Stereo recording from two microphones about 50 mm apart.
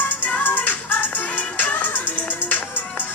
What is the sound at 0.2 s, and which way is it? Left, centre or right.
Music, left.